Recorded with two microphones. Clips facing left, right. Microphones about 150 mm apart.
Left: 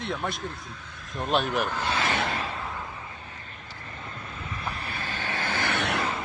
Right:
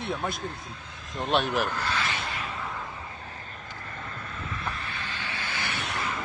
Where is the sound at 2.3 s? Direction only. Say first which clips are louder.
Left 3 dB; 30° left (ahead or behind).